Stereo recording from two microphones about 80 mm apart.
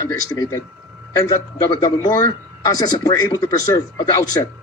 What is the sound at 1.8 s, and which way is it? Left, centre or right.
Speech, left.